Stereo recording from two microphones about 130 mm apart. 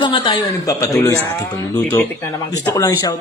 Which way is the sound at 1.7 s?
10° left (ahead or behind).